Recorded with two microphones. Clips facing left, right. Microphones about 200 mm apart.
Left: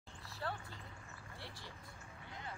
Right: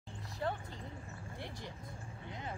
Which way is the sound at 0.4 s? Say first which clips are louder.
Right 6 dB; 20° right (ahead or behind).